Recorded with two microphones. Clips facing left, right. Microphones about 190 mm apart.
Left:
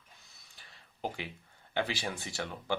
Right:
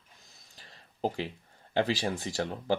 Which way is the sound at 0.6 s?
35° right (ahead or behind).